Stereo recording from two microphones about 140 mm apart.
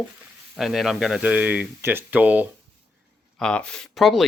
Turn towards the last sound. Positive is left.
turn(degrees=0)  # may be behind; listen again after turning